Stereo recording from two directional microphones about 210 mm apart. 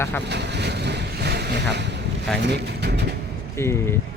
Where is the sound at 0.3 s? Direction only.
55° right (ahead or behind).